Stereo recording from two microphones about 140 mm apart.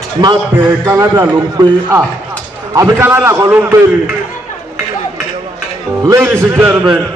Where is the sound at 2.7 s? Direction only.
20° right (ahead or behind).